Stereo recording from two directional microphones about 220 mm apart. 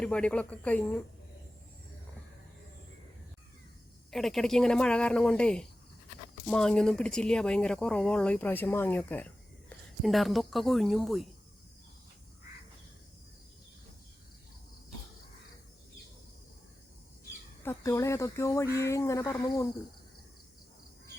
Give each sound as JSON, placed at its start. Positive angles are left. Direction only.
{"t": 0.0, "sound": "speech", "side_deg": 5}
{"t": 4.1, "sound": "speech", "side_deg": 0}
{"t": 17.6, "sound": "speech", "side_deg": 10}